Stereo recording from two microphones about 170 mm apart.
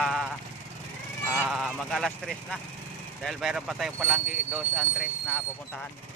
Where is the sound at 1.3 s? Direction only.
5° right (ahead or behind).